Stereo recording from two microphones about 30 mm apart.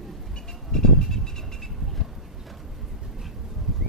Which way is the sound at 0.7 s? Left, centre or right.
Left.